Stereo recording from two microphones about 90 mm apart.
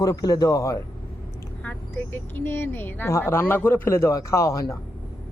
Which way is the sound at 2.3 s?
25° left (ahead or behind).